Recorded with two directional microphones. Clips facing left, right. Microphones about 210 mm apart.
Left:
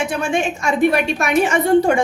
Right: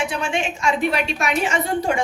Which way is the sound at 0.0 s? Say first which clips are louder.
Left 4 dB; 50° left (ahead or behind).